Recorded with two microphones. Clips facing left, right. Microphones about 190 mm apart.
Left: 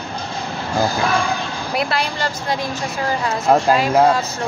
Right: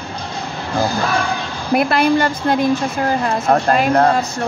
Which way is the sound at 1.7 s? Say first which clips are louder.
Right 8 dB; 50° right (ahead or behind).